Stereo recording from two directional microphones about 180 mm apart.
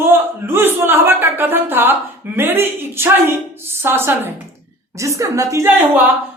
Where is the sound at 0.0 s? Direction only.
10° right (ahead or behind).